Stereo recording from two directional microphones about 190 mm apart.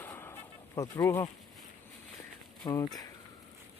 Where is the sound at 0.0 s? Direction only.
10° left (ahead or behind).